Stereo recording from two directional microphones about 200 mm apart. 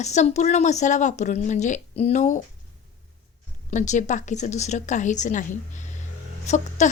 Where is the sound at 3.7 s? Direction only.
35° left (ahead or behind).